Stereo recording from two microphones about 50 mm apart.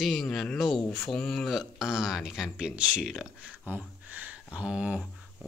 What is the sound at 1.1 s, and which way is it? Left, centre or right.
Speech, centre.